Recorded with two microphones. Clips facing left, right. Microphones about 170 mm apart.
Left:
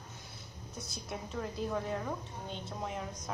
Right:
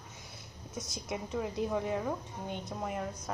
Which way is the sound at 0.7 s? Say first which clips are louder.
Right 4 dB; 20° right (ahead or behind).